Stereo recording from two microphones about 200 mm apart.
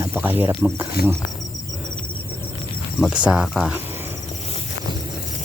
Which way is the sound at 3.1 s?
5° right (ahead or behind).